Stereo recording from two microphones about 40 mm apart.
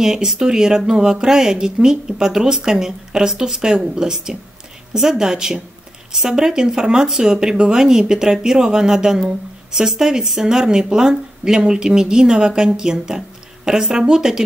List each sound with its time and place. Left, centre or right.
0.0 s speech: centre